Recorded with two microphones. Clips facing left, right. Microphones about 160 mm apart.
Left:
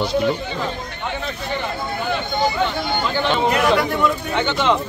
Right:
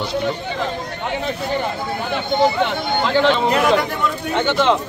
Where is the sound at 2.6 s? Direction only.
90° right.